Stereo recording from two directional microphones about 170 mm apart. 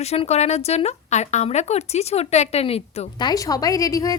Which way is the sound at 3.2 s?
20° left (ahead or behind).